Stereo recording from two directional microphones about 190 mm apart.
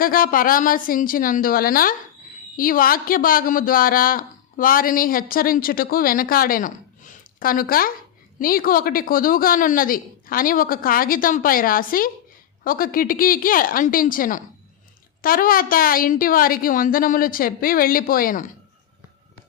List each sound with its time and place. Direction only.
0.0 s speech: 50° left (ahead or behind)